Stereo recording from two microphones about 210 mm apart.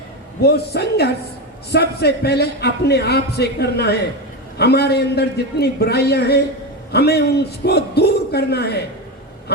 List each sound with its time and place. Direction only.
0.4 s speech: 50° left (ahead or behind)